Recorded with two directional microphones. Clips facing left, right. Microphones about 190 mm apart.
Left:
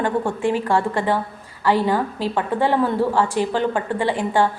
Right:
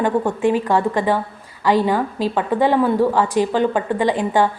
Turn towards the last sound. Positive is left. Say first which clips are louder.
# right 2 dB
turn(degrees=-15)  # may be behind; listen again after turning